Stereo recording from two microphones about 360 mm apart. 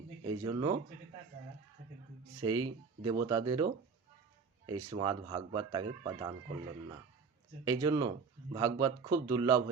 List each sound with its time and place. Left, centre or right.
0.3 s speech: centre
2.4 s speech: centre
4.9 s speech: centre
7.6 s speech: centre